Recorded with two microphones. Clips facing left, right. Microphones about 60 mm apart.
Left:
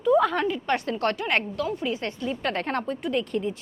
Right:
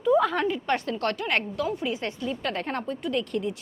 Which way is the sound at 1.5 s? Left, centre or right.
Centre.